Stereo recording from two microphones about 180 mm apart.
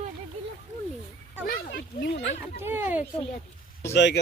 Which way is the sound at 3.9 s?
75° left (ahead or behind).